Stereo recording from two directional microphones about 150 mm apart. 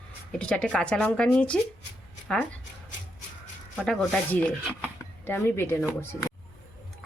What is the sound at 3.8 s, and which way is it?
Speech, 5° left (ahead or behind).